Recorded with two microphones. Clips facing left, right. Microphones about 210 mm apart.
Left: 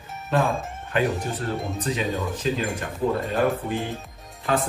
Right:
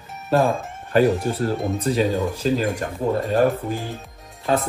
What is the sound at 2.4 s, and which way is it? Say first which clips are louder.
Speech: right 5 dB; 40° right (ahead or behind).